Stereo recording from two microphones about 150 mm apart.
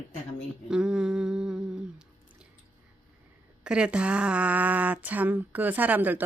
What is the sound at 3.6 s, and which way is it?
A woman's voice, 5° right (ahead or behind).